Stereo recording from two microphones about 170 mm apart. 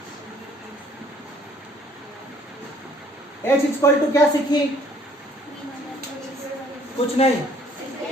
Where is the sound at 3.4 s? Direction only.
15° left (ahead or behind).